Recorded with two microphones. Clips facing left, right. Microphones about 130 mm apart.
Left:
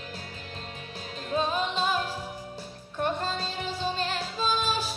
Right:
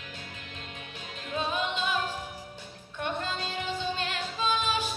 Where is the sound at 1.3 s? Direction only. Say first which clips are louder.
Left 3 dB; 35° left (ahead or behind).